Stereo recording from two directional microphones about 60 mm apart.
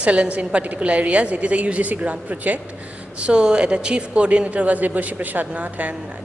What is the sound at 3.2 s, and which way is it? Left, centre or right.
A woman's voice, centre.